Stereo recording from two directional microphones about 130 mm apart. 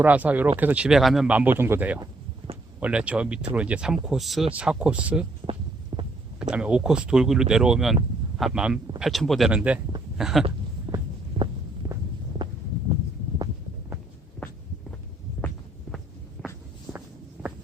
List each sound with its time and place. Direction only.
0.0 s speech: 10° right (ahead or behind)
1.3 s speech: 15° right (ahead or behind)
5.4 s heart sounds: 40° right (ahead or behind)
6.4 s speech: 5° right (ahead or behind)
10.9 s heart sounds: 15° right (ahead or behind)